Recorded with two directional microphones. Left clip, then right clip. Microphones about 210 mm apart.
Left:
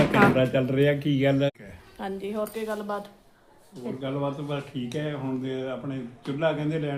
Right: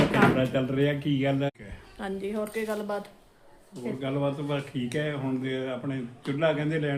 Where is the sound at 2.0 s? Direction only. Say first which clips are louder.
Left 1 dB; 10° left (ahead or behind).